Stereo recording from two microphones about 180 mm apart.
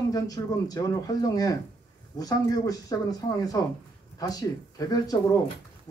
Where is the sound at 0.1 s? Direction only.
20° left (ahead or behind).